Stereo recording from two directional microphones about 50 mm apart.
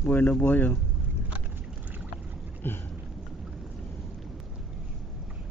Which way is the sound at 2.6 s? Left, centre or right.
Left.